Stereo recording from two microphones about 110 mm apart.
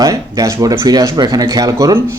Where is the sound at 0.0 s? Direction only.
30° right (ahead or behind).